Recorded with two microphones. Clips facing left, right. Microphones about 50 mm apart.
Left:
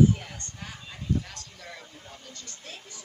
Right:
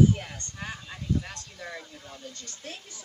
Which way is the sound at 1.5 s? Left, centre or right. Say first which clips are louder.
Right 6 dB; right.